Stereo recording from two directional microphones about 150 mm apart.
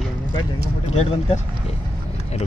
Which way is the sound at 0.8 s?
50° left (ahead or behind).